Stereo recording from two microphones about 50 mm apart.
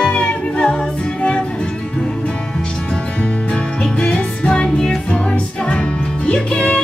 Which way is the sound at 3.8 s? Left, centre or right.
Centre.